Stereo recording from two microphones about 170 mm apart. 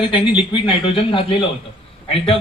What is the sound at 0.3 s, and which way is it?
A man's voice, 30° left (ahead or behind).